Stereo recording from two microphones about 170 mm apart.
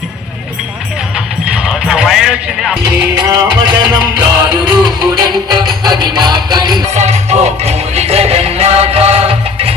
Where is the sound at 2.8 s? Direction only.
25° right (ahead or behind).